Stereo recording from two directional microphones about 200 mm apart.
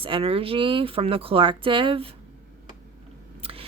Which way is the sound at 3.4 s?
30° right (ahead or behind).